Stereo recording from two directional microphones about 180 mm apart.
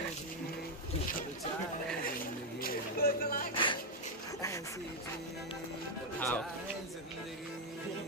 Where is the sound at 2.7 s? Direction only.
55° left (ahead or behind).